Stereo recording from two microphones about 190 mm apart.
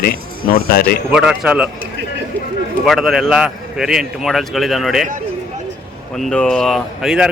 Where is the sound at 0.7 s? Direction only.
55° left (ahead or behind).